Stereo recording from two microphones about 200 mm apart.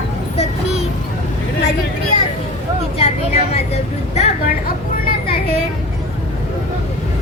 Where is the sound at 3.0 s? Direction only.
30° left (ahead or behind).